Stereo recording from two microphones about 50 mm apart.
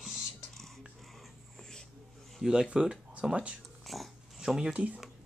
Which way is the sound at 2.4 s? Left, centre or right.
Centre.